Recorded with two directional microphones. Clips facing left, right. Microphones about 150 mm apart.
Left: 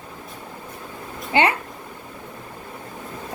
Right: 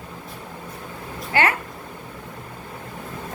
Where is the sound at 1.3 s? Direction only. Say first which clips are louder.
Left 2 dB; 20° left (ahead or behind).